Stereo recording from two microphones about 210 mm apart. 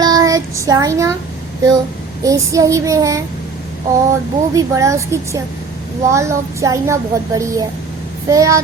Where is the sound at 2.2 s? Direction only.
15° right (ahead or behind).